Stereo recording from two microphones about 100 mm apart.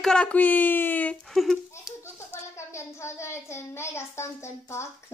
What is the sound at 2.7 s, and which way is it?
Speech, 25° left (ahead or behind).